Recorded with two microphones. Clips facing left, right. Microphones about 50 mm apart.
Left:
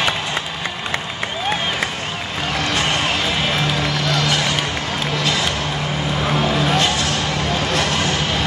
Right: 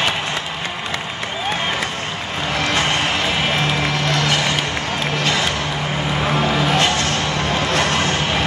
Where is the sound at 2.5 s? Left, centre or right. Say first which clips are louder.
Right 1 dB; right.